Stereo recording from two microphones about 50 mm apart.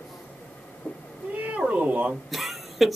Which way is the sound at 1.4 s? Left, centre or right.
Right.